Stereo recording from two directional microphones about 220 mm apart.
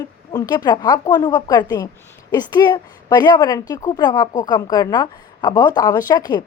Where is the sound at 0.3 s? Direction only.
20° left (ahead or behind).